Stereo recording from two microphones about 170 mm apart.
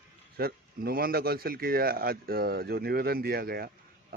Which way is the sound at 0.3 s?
65° right (ahead or behind).